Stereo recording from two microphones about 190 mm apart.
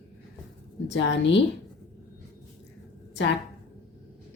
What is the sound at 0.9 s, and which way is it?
Speech, 70° left (ahead or behind).